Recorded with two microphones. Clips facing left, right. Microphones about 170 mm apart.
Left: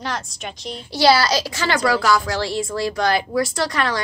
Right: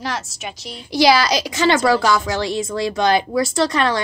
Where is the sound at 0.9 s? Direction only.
15° right (ahead or behind).